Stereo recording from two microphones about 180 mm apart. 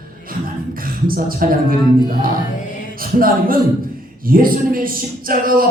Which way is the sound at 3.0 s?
55° right (ahead or behind).